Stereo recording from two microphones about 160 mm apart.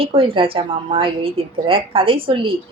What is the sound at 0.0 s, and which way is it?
A woman's voice, 35° right (ahead or behind).